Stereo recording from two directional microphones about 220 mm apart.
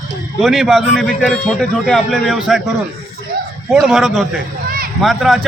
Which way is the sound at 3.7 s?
Centre (ahead or behind).